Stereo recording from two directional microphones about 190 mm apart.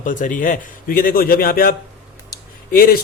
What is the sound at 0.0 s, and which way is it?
A man's voice, 45° left (ahead or behind).